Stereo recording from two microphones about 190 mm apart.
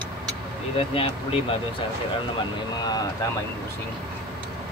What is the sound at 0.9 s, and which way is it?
Speech, 30° left (ahead or behind).